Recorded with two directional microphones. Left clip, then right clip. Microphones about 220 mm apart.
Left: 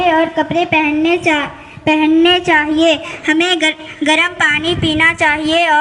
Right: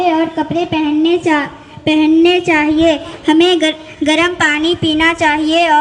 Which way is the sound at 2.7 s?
15° left (ahead or behind).